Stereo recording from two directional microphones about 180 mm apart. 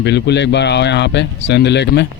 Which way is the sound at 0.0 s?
70° left (ahead or behind).